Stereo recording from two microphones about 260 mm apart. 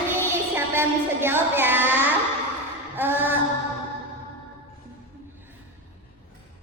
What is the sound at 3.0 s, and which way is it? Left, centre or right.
Child singing, centre.